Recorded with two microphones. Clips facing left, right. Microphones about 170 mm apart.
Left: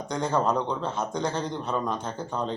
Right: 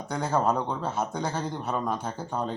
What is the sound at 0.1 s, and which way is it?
Speech, 5° right (ahead or behind).